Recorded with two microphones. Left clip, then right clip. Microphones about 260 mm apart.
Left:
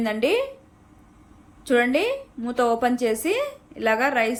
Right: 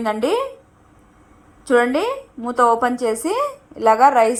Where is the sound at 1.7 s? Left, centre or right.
Right.